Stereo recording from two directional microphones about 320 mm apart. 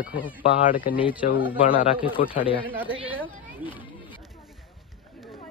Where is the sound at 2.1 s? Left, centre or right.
Centre.